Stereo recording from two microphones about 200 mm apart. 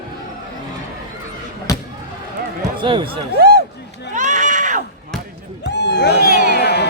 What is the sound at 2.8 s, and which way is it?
Speech, 25° right (ahead or behind).